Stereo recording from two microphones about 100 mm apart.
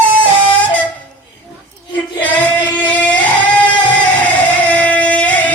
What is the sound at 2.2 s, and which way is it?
Singing, 15° left (ahead or behind).